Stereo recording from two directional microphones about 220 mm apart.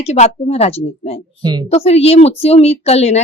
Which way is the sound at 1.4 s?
20° right (ahead or behind).